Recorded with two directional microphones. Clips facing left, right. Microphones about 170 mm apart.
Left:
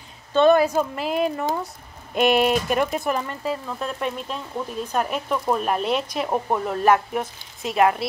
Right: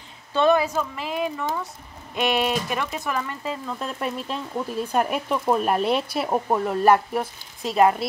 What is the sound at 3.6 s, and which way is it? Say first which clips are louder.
Speech: left 1 dB; 5° left (ahead or behind).